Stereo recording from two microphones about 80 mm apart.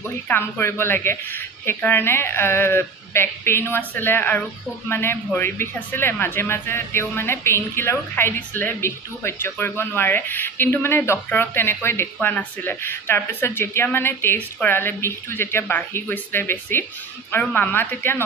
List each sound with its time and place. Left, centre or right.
0.3 s a woman's voice: left